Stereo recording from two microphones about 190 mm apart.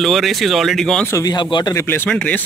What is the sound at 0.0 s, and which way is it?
Speech, centre (ahead or behind).